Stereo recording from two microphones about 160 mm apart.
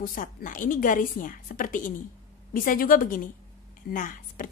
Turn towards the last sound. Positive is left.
turn(degrees=55)  # may be behind; listen again after turning